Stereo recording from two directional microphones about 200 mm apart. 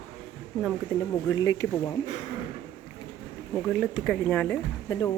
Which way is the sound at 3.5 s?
Centre (ahead or behind).